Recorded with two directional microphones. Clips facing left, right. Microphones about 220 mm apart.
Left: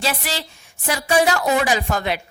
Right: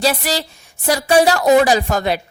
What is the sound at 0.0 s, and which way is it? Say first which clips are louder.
A woman's voice: right 7 dB; 40° right (ahead or behind).